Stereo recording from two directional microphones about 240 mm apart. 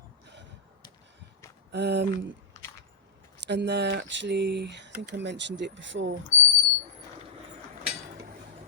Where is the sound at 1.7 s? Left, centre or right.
Right.